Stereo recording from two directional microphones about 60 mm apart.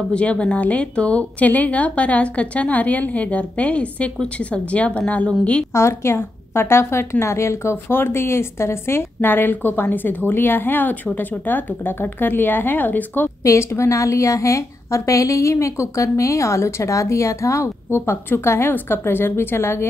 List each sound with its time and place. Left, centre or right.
0.1 s a woman's voice: centre
5.7 s a woman's voice: left
13.4 s a woman's voice: left